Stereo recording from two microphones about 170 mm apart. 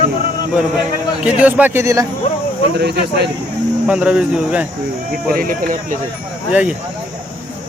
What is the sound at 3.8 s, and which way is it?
Speech, 5° right (ahead or behind).